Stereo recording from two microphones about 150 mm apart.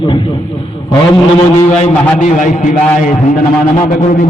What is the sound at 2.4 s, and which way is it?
Speech, 55° left (ahead or behind).